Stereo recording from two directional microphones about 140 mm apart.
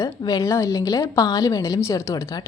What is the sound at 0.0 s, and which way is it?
A woman's voice, 25° left (ahead or behind).